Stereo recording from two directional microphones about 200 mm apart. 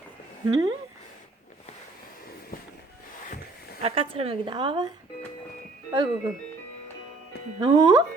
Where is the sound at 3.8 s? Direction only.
30° right (ahead or behind).